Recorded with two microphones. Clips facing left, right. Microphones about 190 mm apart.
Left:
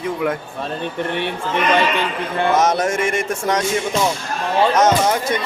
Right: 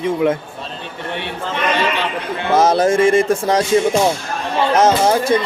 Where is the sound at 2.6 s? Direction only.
30° right (ahead or behind).